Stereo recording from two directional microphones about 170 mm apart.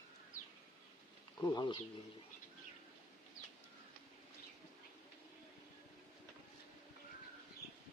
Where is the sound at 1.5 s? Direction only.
25° left (ahead or behind).